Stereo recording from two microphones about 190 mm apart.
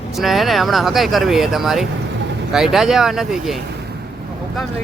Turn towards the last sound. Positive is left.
turn(degrees=0)  # may be behind; listen again after turning